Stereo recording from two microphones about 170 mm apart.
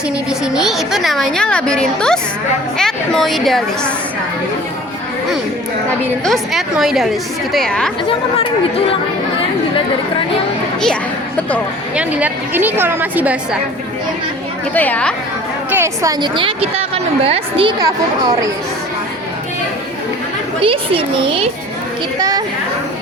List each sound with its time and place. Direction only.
0.3 s a woman's voice: 5° right (ahead or behind)
6.2 s a woman's voice: centre (ahead or behind)
11.9 s a woman's voice: 10° right (ahead or behind)
14.7 s a woman's voice: 10° left (ahead or behind)
15.7 s a woman's voice: 15° right (ahead or behind); by 17.7 s 35° right (ahead or behind)
17.7 s speech: 20° right (ahead or behind)
20.6 s a woman's voice: 30° right (ahead or behind)
22.2 s speech: 20° right (ahead or behind)